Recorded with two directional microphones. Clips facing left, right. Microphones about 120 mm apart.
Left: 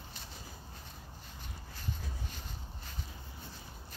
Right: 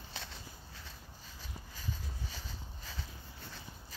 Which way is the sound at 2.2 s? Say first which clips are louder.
Even; 90° right.